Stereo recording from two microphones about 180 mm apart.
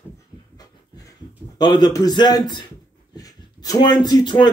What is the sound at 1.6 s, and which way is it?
A man's voice, 25° left (ahead or behind).